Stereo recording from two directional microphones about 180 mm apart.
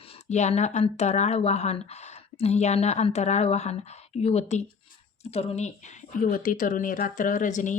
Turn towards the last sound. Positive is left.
turn(degrees=45)  # may be behind; listen again after turning